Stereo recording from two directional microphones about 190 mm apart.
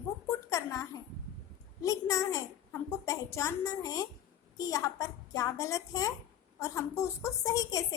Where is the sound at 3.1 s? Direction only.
15° left (ahead or behind).